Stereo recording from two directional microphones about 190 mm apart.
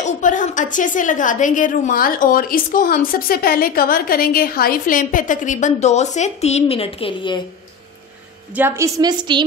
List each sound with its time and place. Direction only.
0.0 s a woman's voice: 40° left (ahead or behind); by 7.4 s 25° left (ahead or behind)
8.5 s a woman's voice: 15° right (ahead or behind)